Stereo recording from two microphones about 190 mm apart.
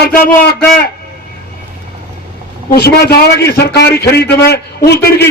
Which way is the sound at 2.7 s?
55° left (ahead or behind).